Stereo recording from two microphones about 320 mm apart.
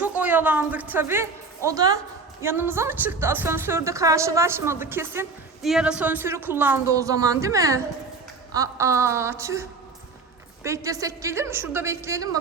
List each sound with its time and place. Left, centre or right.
0.0 s a woman's voice: centre